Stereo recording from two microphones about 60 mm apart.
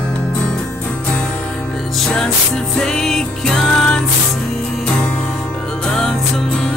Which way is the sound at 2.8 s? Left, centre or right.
Centre.